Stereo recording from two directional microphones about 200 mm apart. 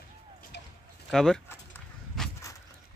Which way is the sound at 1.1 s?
Centre (ahead or behind).